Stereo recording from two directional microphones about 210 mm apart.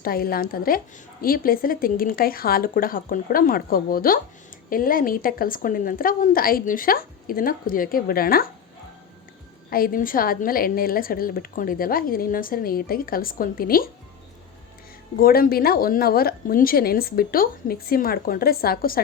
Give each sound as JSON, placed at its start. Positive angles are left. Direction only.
{"t": 0.0, "sound": "a woman's voice", "side_deg": 45}
{"t": 9.6, "sound": "a woman's voice", "side_deg": 45}
{"t": 15.2, "sound": "a woman's voice", "side_deg": 45}